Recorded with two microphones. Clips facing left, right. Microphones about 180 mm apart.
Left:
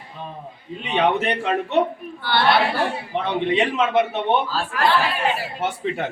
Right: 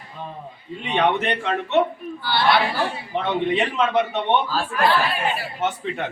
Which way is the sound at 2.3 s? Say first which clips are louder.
Left 2 dB; 60° left (ahead or behind).